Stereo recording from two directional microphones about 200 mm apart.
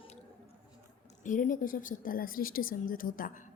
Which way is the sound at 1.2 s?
40° left (ahead or behind).